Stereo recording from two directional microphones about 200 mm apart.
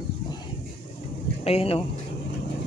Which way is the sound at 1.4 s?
30° left (ahead or behind).